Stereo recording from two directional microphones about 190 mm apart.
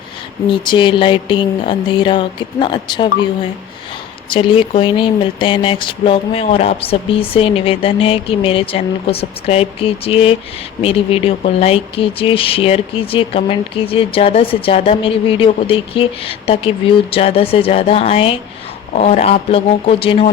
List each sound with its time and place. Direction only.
0.5 s speech: 25° left (ahead or behind)
4.3 s speech: 25° left (ahead or behind)